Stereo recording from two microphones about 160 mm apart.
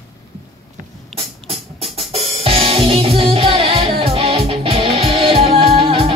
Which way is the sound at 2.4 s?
35° right (ahead or behind).